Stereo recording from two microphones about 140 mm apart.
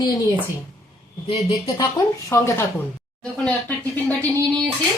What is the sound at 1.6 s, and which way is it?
Speech, 25° left (ahead or behind).